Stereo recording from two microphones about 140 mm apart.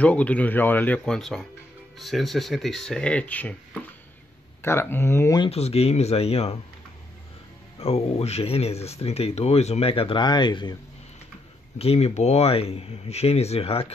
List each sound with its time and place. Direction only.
0.0 s speech: 10° left (ahead or behind)
4.6 s speech: 15° left (ahead or behind)
5.4 s speech: 45° left (ahead or behind)
7.8 s speech: 45° left (ahead or behind)
11.8 s speech: 45° left (ahead or behind)